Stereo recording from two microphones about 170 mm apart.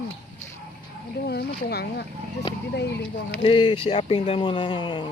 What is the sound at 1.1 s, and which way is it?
Speech, 70° left (ahead or behind).